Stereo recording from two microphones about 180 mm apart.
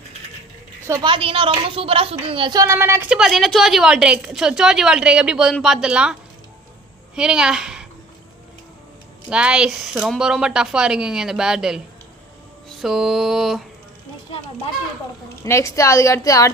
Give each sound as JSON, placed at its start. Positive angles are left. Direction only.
{"t": 1.0, "sound": "a woman's voice", "side_deg": -30}
{"t": 3.1, "sound": "a woman's voice", "side_deg": 0}
{"t": 7.2, "sound": "a woman's voice", "side_deg": -5}
{"t": 9.3, "sound": "a woman's voice", "side_deg": -5}
{"t": 12.6, "sound": "a sound", "side_deg": 0}
{"t": 15.4, "sound": "a woman's voice", "side_deg": 15}